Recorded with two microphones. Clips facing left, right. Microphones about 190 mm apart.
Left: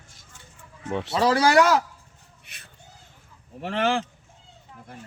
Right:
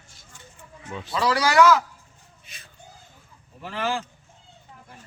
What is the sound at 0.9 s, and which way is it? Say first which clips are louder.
Speech: left 8 dB; 65° left (ahead or behind).